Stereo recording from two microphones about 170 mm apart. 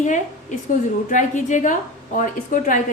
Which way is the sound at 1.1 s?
50° left (ahead or behind).